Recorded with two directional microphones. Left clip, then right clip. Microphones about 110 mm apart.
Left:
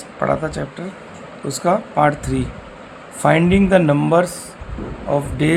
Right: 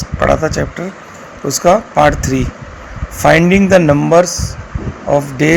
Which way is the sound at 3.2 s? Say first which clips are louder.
Right 6 dB; 50° right (ahead or behind).